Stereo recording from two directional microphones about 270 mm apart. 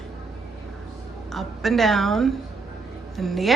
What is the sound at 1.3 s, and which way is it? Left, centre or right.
A woman's voice, centre.